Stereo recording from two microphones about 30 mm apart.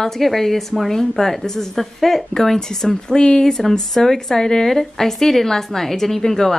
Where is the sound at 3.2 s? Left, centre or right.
Left.